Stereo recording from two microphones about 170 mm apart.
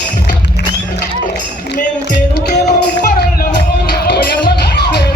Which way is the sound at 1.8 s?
50° left (ahead or behind).